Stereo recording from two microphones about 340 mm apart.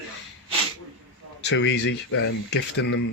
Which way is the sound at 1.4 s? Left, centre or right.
Left.